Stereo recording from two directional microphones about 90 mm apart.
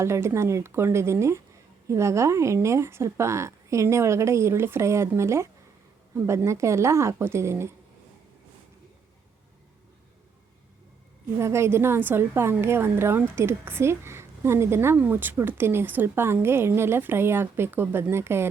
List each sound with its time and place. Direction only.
0.0 s a woman's voice: 30° right (ahead or behind)
11.3 s a woman's voice: 30° right (ahead or behind)